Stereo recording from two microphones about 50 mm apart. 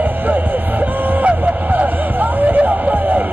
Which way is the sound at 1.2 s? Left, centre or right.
Right.